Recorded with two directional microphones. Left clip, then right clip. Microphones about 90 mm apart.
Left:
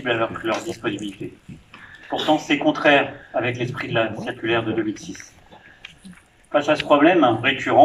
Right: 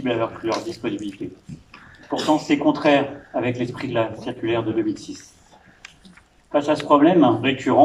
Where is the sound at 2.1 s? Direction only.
10° right (ahead or behind).